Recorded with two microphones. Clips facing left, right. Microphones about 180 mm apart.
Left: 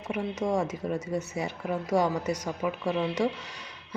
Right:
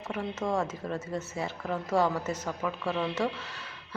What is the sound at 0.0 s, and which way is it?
Speech, 15° left (ahead or behind).